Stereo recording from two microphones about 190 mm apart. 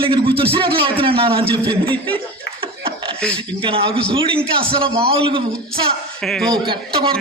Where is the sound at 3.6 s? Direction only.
25° right (ahead or behind).